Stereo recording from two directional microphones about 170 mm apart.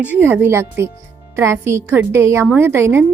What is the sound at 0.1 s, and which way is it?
A woman's voice, 10° right (ahead or behind).